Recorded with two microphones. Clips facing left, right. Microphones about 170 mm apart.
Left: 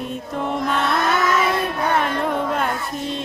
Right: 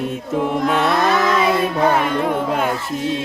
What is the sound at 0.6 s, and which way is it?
Music, centre (ahead or behind).